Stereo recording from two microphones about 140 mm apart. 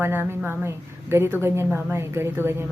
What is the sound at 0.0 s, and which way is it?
A woman's voice, 15° right (ahead or behind).